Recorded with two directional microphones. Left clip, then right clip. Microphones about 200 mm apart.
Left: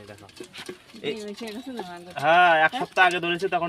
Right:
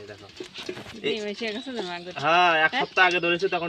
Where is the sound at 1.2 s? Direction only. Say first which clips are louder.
Right 5 dB; 30° right (ahead or behind).